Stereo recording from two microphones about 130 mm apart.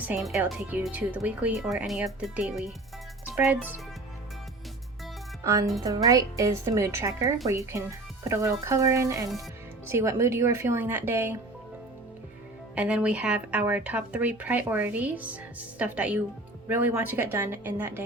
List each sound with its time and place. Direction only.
0.2 s speech: centre (ahead or behind)
0.7 s speech: 15° right (ahead or behind)
3.3 s speech: 10° right (ahead or behind)
5.4 s speech: 25° right (ahead or behind)
12.7 s speech: 10° right (ahead or behind)